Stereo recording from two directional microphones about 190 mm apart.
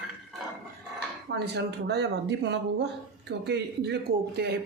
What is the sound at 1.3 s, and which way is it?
Speech, 65° right (ahead or behind).